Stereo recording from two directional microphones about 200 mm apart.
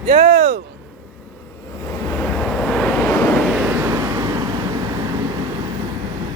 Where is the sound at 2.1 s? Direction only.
Centre (ahead or behind).